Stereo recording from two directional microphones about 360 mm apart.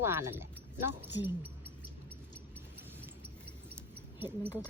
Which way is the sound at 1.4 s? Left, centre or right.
Centre.